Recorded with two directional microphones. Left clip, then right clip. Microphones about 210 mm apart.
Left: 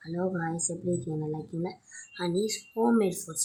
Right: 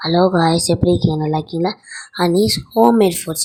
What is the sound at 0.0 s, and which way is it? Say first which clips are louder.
Speech: right 18 dB; 35° right (ahead or behind).